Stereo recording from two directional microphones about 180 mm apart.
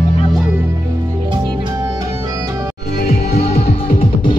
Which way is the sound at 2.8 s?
65° left (ahead or behind).